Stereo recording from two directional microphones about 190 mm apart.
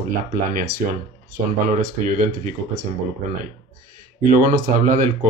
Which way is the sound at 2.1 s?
45° right (ahead or behind).